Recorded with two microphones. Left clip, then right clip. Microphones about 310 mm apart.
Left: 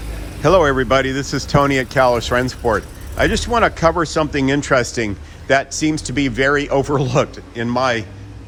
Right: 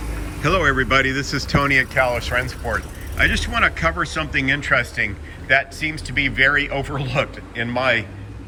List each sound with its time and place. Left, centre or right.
0.4 s speech: centre